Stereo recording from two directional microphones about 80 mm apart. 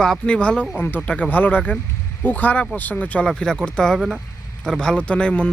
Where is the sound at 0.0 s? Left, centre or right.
Centre.